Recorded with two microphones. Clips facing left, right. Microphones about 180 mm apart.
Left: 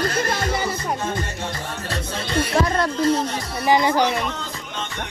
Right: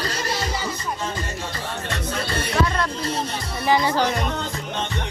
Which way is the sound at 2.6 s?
35° left (ahead or behind).